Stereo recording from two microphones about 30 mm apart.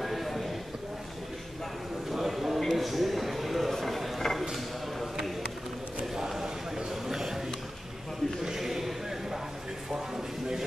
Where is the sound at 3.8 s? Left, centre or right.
Centre.